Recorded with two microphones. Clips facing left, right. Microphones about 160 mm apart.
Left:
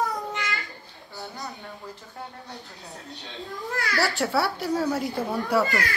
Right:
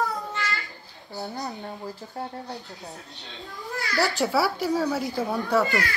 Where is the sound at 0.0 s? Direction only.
20° left (ahead or behind).